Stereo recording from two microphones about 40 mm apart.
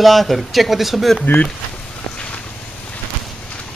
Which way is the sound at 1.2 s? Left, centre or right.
Left.